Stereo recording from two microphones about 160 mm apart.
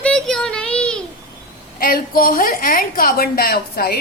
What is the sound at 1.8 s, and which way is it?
A woman's voice, 65° left (ahead or behind).